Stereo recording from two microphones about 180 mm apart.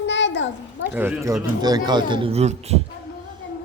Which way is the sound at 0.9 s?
15° right (ahead or behind).